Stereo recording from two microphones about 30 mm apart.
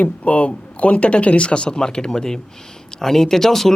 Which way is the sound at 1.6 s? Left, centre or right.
Left.